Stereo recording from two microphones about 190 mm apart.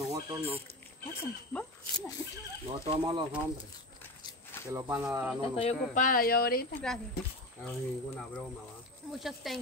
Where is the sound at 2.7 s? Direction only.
25° right (ahead or behind).